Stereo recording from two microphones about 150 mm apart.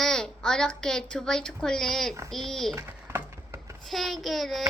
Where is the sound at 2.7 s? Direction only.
15° right (ahead or behind).